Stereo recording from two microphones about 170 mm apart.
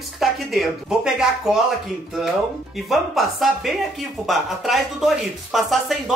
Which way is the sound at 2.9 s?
Centre (ahead or behind).